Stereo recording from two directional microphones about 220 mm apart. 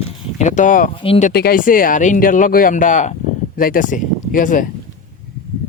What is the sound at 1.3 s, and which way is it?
Speech, 45° left (ahead or behind).